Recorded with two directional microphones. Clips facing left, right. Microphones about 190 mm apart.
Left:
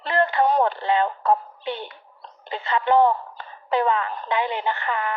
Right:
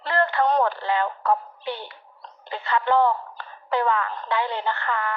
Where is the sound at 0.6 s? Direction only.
20° left (ahead or behind).